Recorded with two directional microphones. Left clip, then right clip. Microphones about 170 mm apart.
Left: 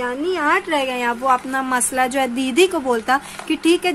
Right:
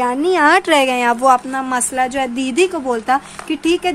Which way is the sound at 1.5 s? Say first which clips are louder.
Right 1 dB; 10° right (ahead or behind).